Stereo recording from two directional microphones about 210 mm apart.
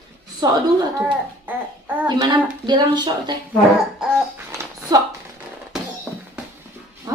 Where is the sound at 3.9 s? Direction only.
5° right (ahead or behind).